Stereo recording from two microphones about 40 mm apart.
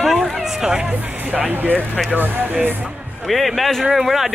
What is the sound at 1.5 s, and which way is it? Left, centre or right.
Speech, right.